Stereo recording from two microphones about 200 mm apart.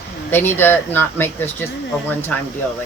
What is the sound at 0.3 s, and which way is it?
Speech, 10° left (ahead or behind).